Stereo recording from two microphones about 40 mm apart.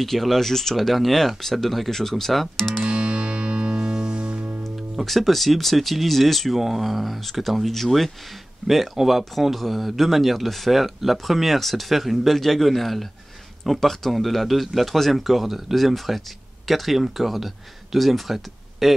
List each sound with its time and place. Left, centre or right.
0.0 s speech: centre
2.9 s music: right
5.0 s speech: centre